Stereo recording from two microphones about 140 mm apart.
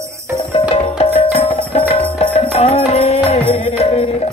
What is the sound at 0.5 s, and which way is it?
Music, 45° left (ahead or behind).